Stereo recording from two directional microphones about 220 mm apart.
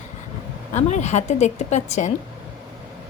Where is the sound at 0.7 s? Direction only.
30° left (ahead or behind).